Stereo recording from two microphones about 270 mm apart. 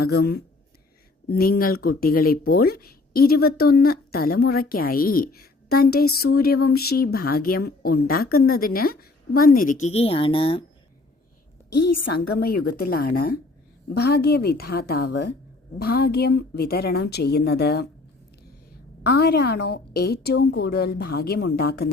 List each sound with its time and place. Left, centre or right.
0.0 s speech: left; by 10.6 s centre
11.7 s a woman's voice: left
12.3 s speech: left
19.0 s speech: left